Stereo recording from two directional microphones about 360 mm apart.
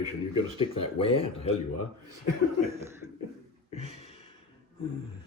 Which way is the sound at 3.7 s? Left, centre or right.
Centre.